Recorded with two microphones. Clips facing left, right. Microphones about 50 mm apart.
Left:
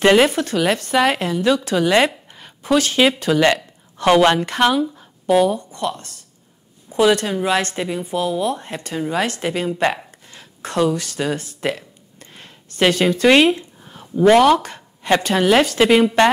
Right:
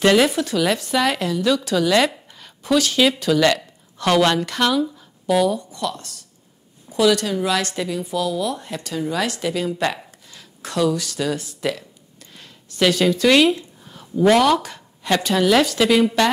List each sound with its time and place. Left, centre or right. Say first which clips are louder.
0.0 s a woman's voice: left 2 dB; left